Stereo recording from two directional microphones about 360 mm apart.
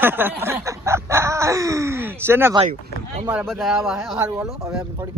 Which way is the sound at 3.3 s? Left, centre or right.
Centre.